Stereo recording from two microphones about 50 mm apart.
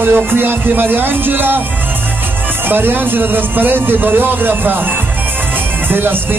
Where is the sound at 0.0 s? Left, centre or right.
Right.